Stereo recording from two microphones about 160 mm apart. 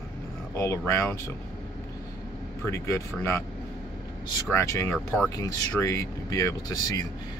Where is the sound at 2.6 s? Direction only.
15° left (ahead or behind).